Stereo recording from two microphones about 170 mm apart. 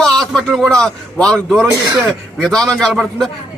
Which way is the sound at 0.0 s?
Centre (ahead or behind).